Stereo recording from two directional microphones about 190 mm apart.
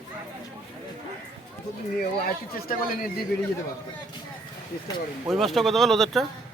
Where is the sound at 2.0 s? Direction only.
50° left (ahead or behind).